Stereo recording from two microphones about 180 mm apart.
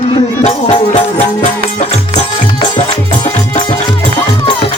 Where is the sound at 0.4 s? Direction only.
40° left (ahead or behind).